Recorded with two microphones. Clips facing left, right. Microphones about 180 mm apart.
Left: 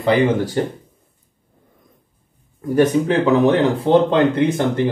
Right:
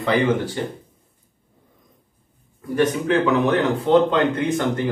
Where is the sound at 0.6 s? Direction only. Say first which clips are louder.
Left 6 dB; 50° left (ahead or behind).